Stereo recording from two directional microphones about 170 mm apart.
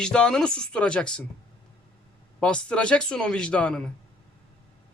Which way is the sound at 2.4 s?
5° left (ahead or behind).